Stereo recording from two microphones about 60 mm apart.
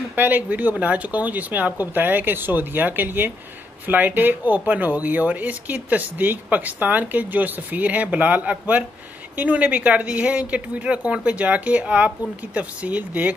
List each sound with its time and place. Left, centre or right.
0.1 s speech: right